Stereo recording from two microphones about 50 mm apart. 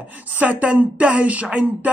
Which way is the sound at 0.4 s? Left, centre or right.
Right.